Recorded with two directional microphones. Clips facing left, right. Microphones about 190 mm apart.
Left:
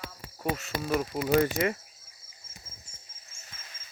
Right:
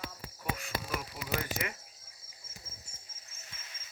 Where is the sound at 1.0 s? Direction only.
50° left (ahead or behind).